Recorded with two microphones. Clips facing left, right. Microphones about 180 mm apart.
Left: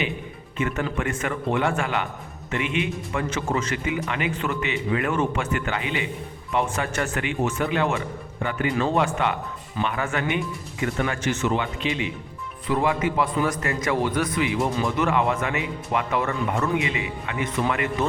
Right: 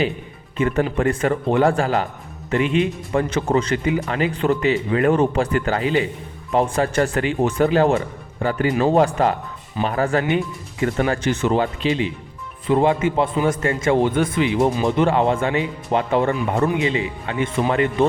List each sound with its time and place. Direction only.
0.5 s a man's voice: 35° right (ahead or behind)